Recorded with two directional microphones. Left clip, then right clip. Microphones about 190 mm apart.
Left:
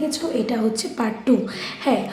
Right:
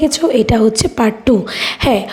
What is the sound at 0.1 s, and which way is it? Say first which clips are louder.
A woman's voice: right 11 dB; 45° right (ahead or behind).